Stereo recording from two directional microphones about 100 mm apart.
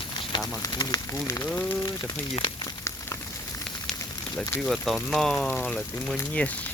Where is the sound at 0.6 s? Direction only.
40° left (ahead or behind).